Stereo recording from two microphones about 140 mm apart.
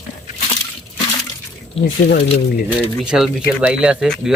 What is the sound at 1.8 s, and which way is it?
Speech, 45° left (ahead or behind).